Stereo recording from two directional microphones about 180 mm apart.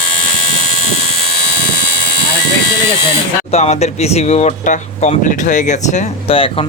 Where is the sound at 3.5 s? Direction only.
35° left (ahead or behind).